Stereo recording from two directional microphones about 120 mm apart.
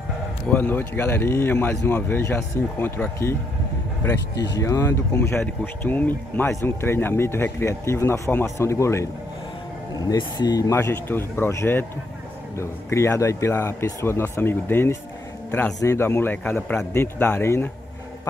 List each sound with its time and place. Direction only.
0.5 s speech: 15° left (ahead or behind)